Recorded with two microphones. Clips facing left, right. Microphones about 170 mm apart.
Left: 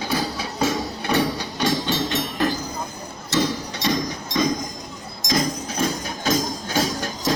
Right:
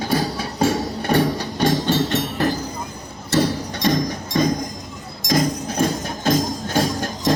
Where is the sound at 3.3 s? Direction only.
50° right (ahead or behind).